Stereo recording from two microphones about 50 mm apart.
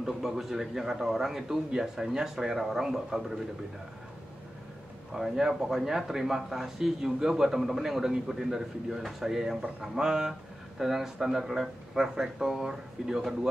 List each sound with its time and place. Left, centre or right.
0.0 s speech: centre
5.1 s speech: centre
9.6 s speech: right